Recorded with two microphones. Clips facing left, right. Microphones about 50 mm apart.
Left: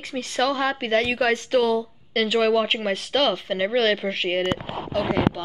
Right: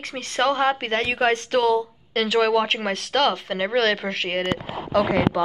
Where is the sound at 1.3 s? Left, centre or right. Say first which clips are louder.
Right 1 dB; right.